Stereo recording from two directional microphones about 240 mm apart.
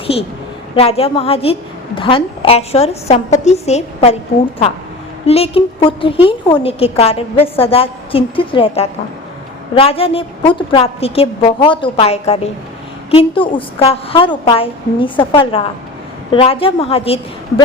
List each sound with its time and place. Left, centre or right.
0.8 s a woman's voice: left
5.2 s a woman's voice: left